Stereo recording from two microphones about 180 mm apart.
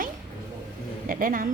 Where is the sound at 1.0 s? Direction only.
50° right (ahead or behind).